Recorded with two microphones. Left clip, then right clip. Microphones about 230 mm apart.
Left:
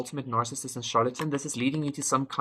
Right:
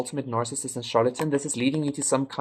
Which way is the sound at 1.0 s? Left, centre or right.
Centre.